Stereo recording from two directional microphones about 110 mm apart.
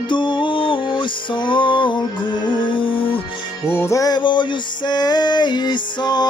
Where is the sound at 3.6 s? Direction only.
25° left (ahead or behind).